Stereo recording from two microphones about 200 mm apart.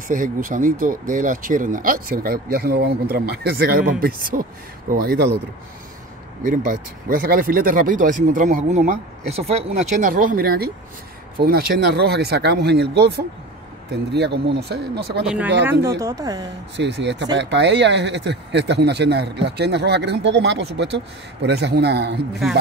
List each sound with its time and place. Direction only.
0.1 s speech: 45° right (ahead or behind)
6.4 s speech: 40° right (ahead or behind)
15.2 s speech: 5° right (ahead or behind)
16.7 s speech: 60° right (ahead or behind)